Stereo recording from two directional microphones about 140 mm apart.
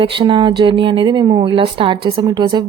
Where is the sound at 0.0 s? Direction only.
35° right (ahead or behind).